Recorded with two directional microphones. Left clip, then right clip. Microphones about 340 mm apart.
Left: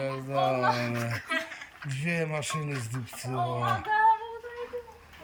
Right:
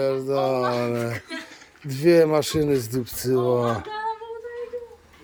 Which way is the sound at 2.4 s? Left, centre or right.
Centre.